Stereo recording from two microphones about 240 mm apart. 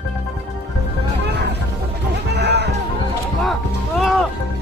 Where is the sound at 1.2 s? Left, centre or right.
Right.